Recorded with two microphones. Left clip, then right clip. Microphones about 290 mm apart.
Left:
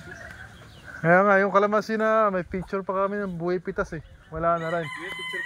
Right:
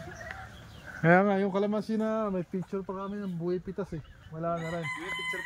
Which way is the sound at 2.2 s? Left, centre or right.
Left.